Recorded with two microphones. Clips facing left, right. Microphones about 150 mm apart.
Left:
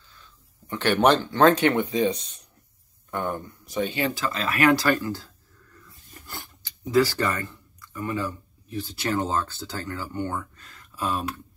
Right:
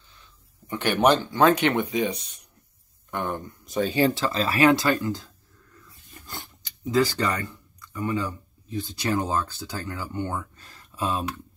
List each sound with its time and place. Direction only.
0.7 s speech: 15° right (ahead or behind)
3.1 s speech: 20° right (ahead or behind)
7.1 s speech: 20° right (ahead or behind)
10.6 s a sound: 30° right (ahead or behind)